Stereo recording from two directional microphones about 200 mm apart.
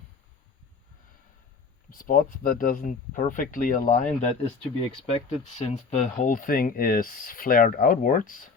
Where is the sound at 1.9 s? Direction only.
45° left (ahead or behind).